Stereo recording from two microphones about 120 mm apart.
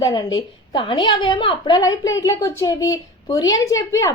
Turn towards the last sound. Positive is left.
turn(degrees=25)  # may be behind; listen again after turning